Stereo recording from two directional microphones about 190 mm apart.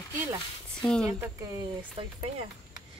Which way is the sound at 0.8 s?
5° left (ahead or behind).